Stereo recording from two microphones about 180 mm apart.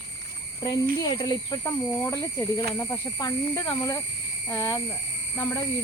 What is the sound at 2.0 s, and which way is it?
Speech, 20° left (ahead or behind).